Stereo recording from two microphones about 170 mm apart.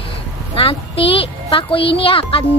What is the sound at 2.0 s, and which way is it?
Speech, 30° left (ahead or behind).